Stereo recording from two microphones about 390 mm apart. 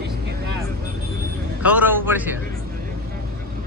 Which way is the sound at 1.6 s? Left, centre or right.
Centre.